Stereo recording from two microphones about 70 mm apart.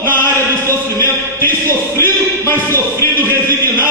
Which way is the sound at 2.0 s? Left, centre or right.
Left.